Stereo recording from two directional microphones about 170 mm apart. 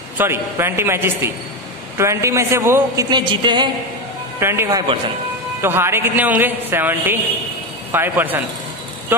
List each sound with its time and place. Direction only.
0.2 s a woman's voice: 15° right (ahead or behind)
3.1 s a woman's voice: 25° right (ahead or behind)
4.4 s a woman's voice: 15° right (ahead or behind)